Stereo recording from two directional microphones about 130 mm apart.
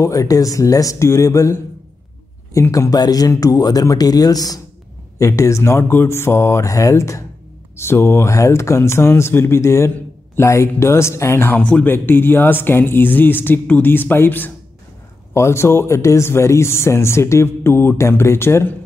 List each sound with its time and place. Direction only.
0.0 s speech: 25° left (ahead or behind)